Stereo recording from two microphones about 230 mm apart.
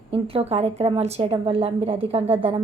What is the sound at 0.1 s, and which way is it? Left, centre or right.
A woman's voice, right.